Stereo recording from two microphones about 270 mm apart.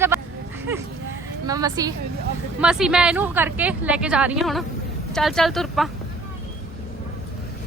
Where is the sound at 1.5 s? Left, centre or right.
Centre.